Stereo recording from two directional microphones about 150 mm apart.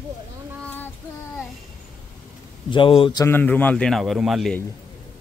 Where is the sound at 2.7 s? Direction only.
35° left (ahead or behind).